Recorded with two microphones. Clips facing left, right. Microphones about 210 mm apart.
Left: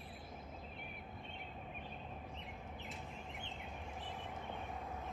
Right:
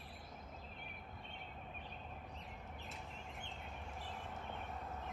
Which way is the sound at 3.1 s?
15° left (ahead or behind).